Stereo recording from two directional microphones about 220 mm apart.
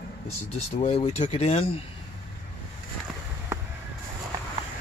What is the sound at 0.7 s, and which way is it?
Speech, 30° left (ahead or behind).